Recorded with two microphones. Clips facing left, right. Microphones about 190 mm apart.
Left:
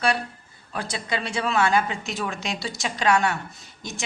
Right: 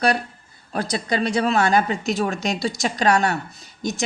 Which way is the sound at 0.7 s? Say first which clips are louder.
Right 5 dB; 40° right (ahead or behind).